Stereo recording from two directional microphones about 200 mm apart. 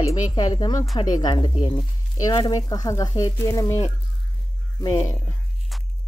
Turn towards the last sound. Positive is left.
turn(degrees=15)  # may be behind; listen again after turning